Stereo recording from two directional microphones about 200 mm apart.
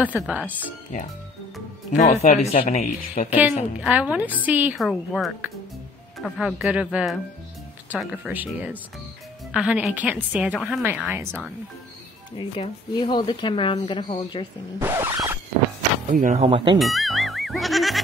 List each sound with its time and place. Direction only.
0.0 s a woman's voice: 5° right (ahead or behind)
2.0 s speech: 35° left (ahead or behind)
3.3 s a woman's voice: 5° right (ahead or behind)
12.4 s speech: 25° left (ahead or behind)
14.8 s a sound: 10° right (ahead or behind)
16.1 s speech: 40° right (ahead or behind)
16.7 s music: centre (ahead or behind)